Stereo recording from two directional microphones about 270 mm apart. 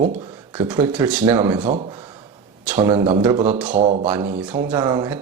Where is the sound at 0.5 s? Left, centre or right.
Centre.